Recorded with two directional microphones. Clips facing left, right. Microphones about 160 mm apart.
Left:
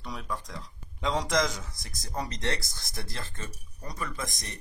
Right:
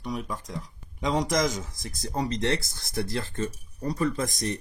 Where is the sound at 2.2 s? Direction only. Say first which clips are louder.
Right 6 dB; 30° right (ahead or behind).